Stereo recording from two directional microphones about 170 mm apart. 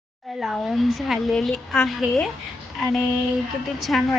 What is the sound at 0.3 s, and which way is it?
A woman's voice, centre (ahead or behind).